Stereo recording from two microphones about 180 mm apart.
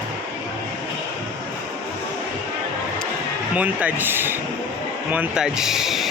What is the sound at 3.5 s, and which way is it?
Speech, 10° right (ahead or behind).